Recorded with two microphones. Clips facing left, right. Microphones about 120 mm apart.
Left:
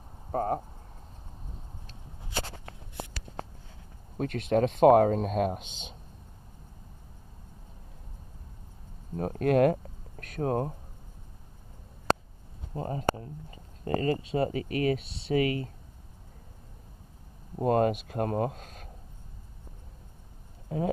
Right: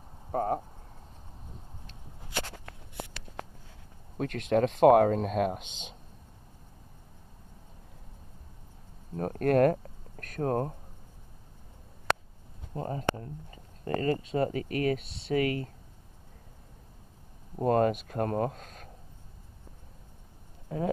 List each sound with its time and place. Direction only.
0.4 s speech: centre (ahead or behind)
2.3 s walk: 25° left (ahead or behind)
4.2 s speech: 30° left (ahead or behind)
9.1 s speech: 20° left (ahead or behind)
9.5 s a sound: 15° left (ahead or behind)
10.4 s speech: 20° left (ahead or behind)
12.7 s speech: 15° left (ahead or behind)
17.6 s speech: 20° left (ahead or behind)